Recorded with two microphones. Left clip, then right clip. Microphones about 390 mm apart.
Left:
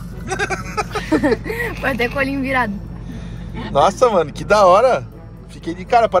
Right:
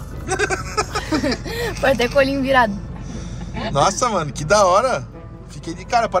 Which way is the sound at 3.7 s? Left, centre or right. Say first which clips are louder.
Left 5 dB; centre.